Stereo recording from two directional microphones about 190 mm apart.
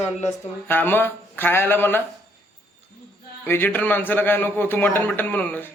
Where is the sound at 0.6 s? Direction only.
10° left (ahead or behind).